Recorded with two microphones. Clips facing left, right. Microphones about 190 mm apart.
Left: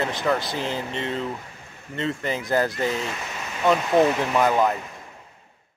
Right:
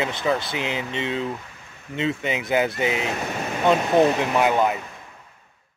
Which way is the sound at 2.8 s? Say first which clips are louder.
Right 2 dB; 70° right (ahead or behind).